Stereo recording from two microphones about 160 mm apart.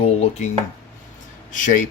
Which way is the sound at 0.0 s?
40° left (ahead or behind).